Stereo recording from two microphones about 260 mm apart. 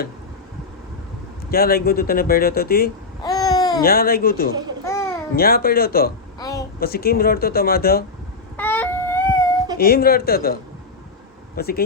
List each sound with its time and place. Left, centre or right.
1.5 s speech: left
3.2 s babbling: centre
3.8 s speech: left
4.9 s babbling: centre
5.4 s speech: left
6.4 s a sound: centre
6.7 s speech: left
8.5 s a sound: centre
9.7 s speech: left